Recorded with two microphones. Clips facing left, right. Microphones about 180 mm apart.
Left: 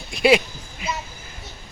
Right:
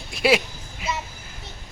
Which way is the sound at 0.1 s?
5° right (ahead or behind).